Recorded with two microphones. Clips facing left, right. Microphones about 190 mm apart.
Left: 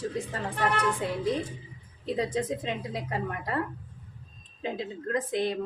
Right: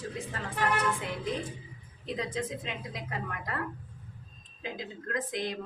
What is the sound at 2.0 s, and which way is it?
A woman's voice, 35° left (ahead or behind).